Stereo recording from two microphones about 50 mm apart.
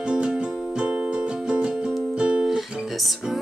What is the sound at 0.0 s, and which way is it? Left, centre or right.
Music, centre.